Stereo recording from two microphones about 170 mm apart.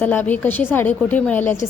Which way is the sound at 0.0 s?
10° left (ahead or behind).